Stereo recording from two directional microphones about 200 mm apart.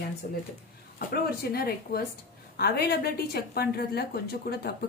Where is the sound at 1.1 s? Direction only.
50° left (ahead or behind).